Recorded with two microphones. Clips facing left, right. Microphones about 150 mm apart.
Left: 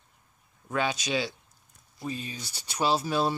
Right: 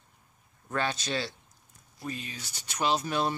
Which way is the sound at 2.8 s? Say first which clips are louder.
Left 2 dB; 35° left (ahead or behind).